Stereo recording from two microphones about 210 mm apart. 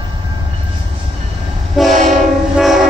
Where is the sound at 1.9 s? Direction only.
35° right (ahead or behind).